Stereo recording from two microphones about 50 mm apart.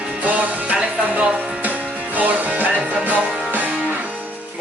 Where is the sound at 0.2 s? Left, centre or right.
Right.